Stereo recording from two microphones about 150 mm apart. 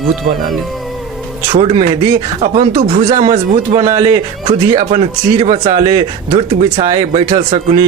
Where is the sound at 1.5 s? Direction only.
40° right (ahead or behind).